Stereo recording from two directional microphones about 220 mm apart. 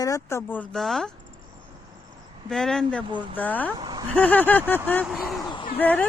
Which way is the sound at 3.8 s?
20° right (ahead or behind).